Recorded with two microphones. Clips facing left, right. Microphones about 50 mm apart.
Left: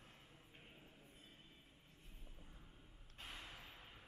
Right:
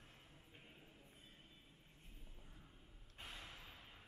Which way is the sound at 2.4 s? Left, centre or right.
Centre.